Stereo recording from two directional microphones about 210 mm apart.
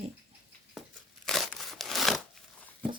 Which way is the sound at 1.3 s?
Centre (ahead or behind).